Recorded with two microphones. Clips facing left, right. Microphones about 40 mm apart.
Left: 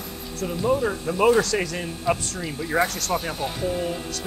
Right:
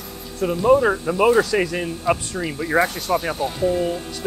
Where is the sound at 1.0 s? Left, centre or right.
Centre.